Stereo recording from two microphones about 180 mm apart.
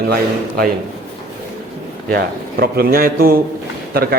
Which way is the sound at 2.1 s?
60° right (ahead or behind).